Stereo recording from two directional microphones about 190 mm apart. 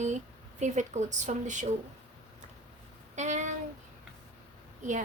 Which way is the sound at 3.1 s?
40° right (ahead or behind).